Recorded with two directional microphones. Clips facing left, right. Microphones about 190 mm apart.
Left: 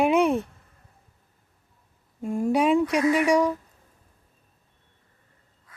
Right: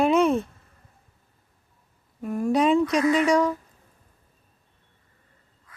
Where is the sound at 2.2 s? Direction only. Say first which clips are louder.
Even; 25° left (ahead or behind).